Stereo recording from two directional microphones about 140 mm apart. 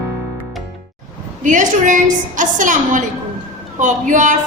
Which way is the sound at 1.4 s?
65° right (ahead or behind).